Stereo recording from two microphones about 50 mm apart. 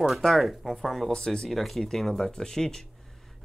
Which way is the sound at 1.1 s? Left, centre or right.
Centre.